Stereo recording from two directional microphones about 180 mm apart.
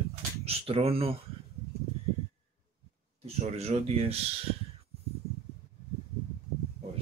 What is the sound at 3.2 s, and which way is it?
Speech, 35° right (ahead or behind).